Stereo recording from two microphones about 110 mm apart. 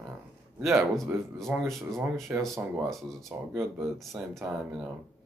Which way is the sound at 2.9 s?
Centre (ahead or behind).